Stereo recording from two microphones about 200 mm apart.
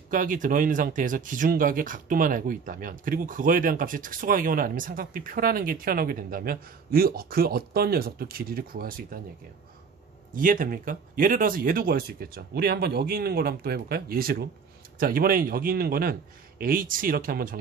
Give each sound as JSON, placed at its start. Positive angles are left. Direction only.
{"t": 0.1, "sound": "speech", "side_deg": -40}
{"t": 10.3, "sound": "speech", "side_deg": -45}